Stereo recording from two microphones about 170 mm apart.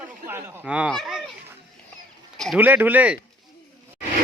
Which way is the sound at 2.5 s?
10° right (ahead or behind).